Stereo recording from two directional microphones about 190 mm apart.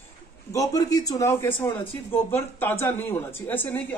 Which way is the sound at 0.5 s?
20° left (ahead or behind).